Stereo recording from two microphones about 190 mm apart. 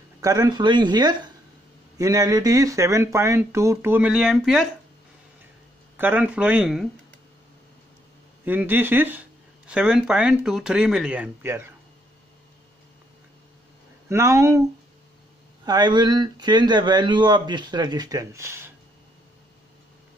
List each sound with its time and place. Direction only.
0.2 s speech: 20° right (ahead or behind); by 4.6 s centre (ahead or behind)
5.9 s speech: 10° right (ahead or behind)
8.5 s speech: 10° right (ahead or behind)
14.0 s speech: 15° right (ahead or behind)
15.6 s speech: 20° right (ahead or behind)